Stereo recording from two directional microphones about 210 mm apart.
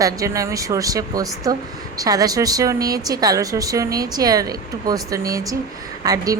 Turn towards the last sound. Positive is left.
turn(degrees=-15)  # may be behind; listen again after turning